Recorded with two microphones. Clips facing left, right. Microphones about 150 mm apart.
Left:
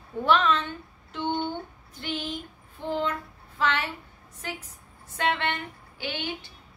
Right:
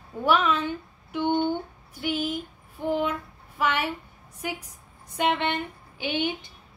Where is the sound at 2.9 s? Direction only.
10° right (ahead or behind).